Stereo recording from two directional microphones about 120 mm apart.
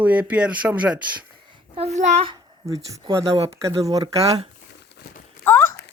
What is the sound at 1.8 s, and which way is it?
Speech, 70° right (ahead or behind).